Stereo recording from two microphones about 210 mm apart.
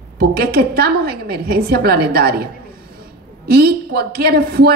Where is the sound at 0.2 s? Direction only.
50° right (ahead or behind).